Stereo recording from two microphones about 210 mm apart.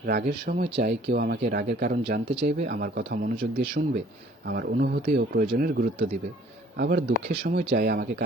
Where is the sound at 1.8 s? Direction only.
45° right (ahead or behind).